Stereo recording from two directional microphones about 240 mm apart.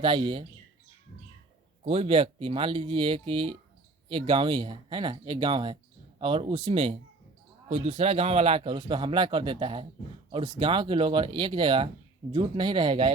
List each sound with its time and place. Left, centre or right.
0.0 s speech: right
1.8 s speech: right